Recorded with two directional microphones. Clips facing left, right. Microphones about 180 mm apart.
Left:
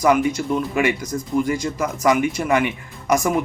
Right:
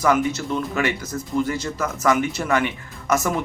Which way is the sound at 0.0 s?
10° left (ahead or behind).